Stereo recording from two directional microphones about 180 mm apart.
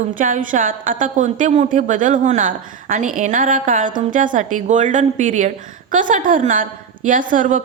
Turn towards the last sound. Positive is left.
turn(degrees=-45)  # may be behind; listen again after turning